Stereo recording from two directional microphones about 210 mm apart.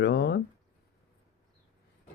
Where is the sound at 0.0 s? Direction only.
55° left (ahead or behind).